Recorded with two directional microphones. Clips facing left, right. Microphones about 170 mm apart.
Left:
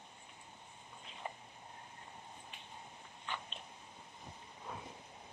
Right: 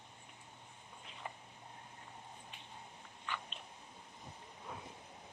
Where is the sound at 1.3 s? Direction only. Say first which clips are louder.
Left 3 dB; 20° left (ahead or behind).